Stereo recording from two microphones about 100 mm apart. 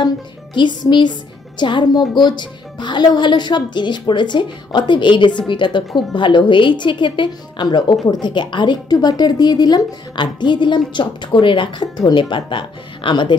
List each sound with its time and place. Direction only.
0.6 s a woman's voice: 50° left (ahead or behind)